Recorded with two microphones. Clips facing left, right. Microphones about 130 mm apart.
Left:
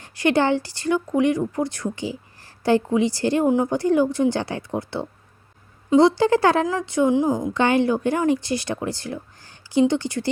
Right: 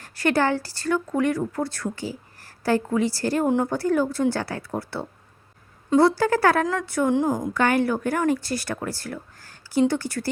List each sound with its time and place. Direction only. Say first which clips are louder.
0.0 s a woman's voice: left 2 dB; 20° left (ahead or behind)